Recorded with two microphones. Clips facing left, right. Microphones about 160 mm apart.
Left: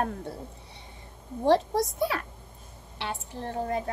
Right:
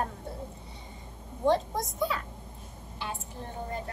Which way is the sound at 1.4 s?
75° left (ahead or behind).